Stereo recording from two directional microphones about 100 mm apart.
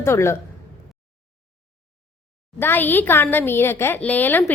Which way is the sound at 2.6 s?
20° left (ahead or behind).